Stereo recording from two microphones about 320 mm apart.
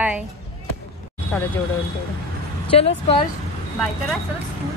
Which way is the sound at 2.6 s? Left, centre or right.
Centre.